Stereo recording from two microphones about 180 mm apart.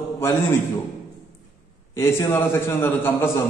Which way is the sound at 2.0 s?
15° left (ahead or behind).